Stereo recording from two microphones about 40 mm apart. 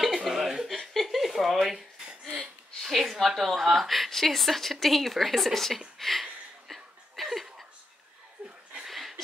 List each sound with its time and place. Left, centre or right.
0.0 s chuckle: centre
0.9 s a sound: centre
2.8 s a woman's voice: centre
6.7 s chuckle: centre
8.4 s chuckle: right
8.8 s a sound: centre